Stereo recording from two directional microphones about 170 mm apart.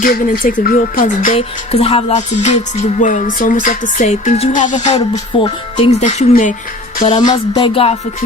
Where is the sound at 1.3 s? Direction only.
35° left (ahead or behind).